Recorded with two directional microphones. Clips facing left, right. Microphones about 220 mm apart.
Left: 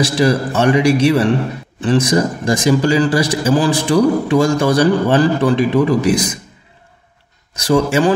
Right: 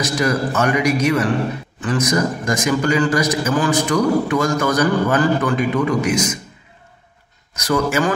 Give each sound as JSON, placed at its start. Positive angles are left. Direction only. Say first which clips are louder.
{"t": 0.0, "sound": "a man's voice", "louder": "left 4 dB", "side_deg": 30}
{"t": 7.5, "sound": "a man's voice", "louder": "left 4 dB", "side_deg": 30}